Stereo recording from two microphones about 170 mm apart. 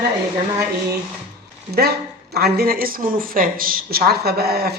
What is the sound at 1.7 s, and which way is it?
Speech, 70° right (ahead or behind).